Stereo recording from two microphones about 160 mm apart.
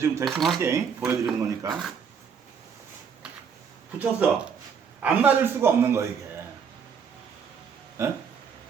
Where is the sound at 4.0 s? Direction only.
5° right (ahead or behind).